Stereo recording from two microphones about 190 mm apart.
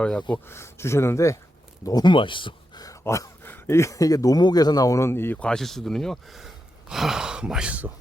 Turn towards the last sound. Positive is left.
turn(degrees=-5)  # may be behind; listen again after turning